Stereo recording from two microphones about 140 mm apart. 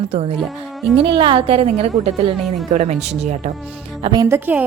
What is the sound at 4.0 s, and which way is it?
Speech, 35° right (ahead or behind).